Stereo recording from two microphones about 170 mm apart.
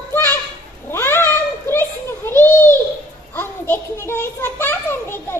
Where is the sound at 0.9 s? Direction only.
15° left (ahead or behind).